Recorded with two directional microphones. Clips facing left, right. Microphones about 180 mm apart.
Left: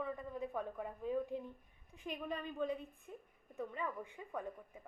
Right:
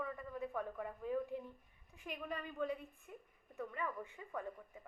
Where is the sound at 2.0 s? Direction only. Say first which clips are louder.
Left 3 dB; 25° left (ahead or behind).